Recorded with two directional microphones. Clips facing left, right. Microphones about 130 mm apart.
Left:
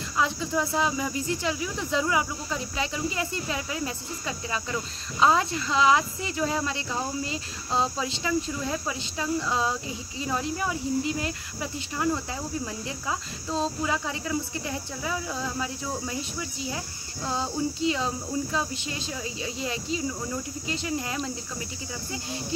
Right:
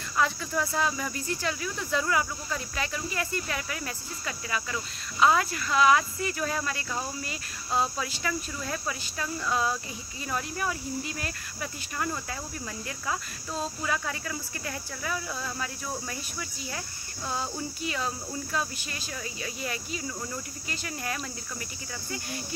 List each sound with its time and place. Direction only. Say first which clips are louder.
0.2 s speech: left 1 dB; 20° left (ahead or behind)
5.2 s speech: left 1 dB; 25° left (ahead or behind)